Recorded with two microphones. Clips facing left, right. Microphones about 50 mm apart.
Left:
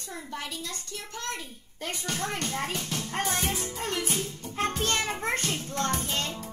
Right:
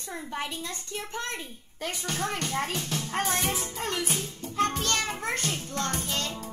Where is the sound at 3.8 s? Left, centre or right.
Right.